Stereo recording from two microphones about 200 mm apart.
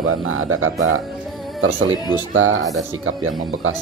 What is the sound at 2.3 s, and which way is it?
Speech, 90° right.